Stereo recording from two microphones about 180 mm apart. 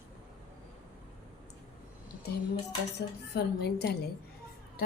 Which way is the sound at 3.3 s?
65° left (ahead or behind).